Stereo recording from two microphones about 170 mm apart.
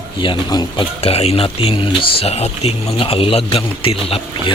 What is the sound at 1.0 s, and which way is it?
Speech, 35° left (ahead or behind).